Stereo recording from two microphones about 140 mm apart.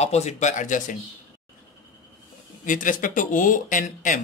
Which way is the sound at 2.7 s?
70° left (ahead or behind).